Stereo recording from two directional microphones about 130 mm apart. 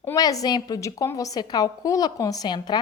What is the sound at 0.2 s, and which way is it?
A woman's voice, 30° left (ahead or behind).